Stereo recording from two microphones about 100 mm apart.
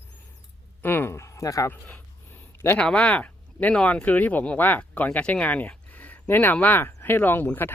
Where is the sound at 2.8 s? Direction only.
10° left (ahead or behind).